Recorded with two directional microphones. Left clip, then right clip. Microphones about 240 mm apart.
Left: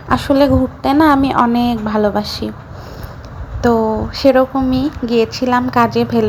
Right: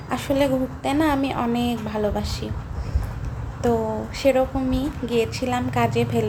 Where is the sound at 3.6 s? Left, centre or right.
Centre.